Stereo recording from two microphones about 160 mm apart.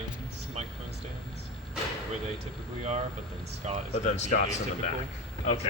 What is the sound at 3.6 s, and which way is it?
Speech, 45° right (ahead or behind).